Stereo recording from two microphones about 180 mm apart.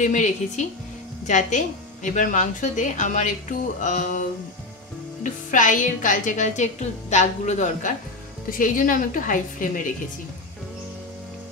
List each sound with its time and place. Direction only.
0.0 s a woman's voice: 40° left (ahead or behind)